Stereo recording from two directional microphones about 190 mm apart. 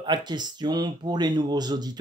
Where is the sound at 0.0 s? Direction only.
20° right (ahead or behind).